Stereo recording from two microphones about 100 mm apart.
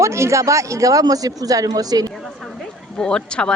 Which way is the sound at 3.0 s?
10° left (ahead or behind).